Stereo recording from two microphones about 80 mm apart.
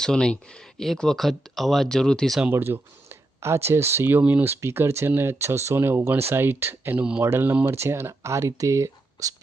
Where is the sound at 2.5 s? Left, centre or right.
Right.